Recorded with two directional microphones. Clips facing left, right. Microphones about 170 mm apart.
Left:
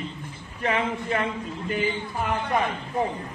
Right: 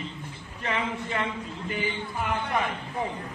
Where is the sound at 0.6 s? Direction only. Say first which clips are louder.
Left 5 dB; 45° left (ahead or behind).